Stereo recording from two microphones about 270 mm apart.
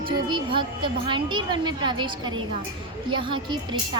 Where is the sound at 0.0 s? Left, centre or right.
Centre.